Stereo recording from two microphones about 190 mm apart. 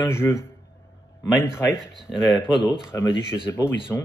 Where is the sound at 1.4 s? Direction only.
15° left (ahead or behind).